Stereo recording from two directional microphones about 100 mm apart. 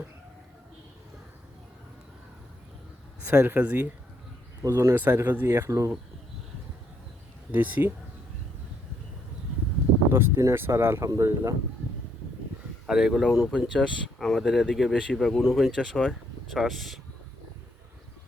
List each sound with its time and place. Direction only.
3.3 s speech: 20° right (ahead or behind)
4.6 s speech: 30° right (ahead or behind)
5.5 s speech: 30° right (ahead or behind)
7.5 s speech: 20° right (ahead or behind)
10.1 s speech: 25° right (ahead or behind)
12.9 s speech: 5° right (ahead or behind)